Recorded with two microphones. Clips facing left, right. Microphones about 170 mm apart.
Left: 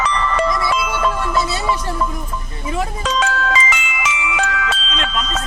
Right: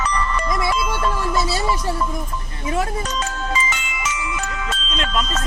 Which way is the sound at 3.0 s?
90° left.